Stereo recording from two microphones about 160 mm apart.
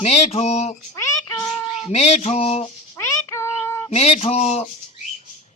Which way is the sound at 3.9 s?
40° left (ahead or behind).